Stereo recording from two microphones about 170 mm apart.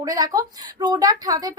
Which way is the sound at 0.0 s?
20° right (ahead or behind).